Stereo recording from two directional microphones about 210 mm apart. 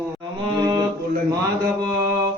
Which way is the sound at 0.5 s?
20° right (ahead or behind).